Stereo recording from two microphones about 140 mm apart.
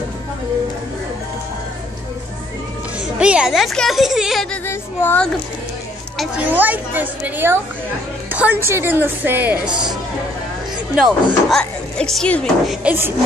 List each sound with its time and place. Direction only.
3.2 s speech: 5° right (ahead or behind)
4.6 s music: 15° left (ahead or behind)
6.1 s speech: 10° right (ahead or behind)
11.0 s speech: centre (ahead or behind)
12.8 s speech: 15° right (ahead or behind)